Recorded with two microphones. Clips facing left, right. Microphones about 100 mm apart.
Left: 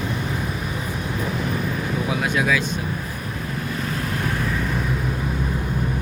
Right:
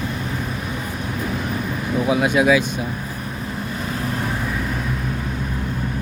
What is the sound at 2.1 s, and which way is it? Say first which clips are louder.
Speech: right 7 dB; 20° right (ahead or behind).